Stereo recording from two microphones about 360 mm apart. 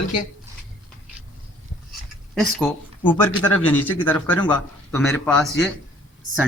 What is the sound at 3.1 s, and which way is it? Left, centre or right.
Speech, centre.